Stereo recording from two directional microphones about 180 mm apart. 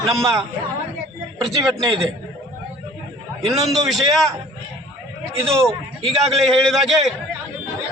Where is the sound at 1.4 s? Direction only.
Centre (ahead or behind).